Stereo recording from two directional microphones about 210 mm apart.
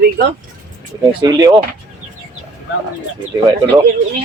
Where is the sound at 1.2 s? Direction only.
15° right (ahead or behind).